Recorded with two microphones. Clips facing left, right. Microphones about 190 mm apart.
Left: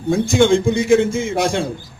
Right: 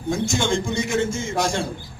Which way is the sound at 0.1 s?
55° left (ahead or behind).